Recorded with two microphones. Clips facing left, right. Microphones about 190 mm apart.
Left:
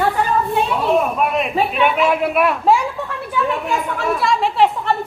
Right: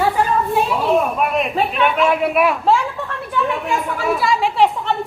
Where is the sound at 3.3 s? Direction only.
Centre (ahead or behind).